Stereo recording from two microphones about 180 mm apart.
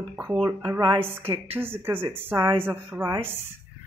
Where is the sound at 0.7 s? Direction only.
15° right (ahead or behind).